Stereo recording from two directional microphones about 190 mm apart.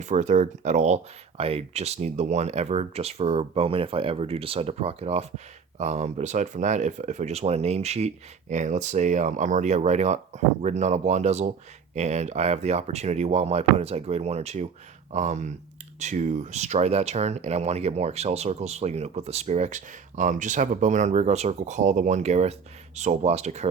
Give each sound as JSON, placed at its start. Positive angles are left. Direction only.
{"t": 0.0, "sound": "speech", "side_deg": -40}